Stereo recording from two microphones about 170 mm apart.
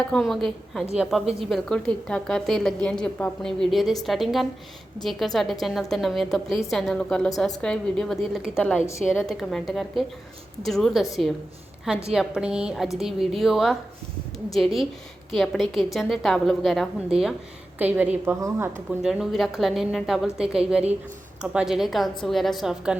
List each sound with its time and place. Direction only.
0.1 s a woman's voice: centre (ahead or behind); by 18.7 s 15° right (ahead or behind)
19.0 s a woman's voice: centre (ahead or behind)